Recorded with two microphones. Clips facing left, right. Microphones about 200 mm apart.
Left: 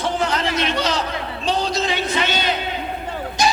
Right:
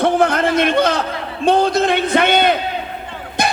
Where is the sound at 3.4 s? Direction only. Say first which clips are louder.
Even; 55° right (ahead or behind).